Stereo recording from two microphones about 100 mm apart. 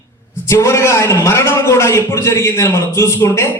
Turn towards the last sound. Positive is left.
turn(degrees=25)  # may be behind; listen again after turning